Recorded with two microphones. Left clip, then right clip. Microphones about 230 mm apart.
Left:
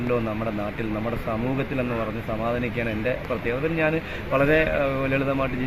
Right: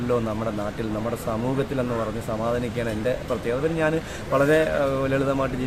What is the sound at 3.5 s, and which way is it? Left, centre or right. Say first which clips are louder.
Speech: right 1 dB; centre.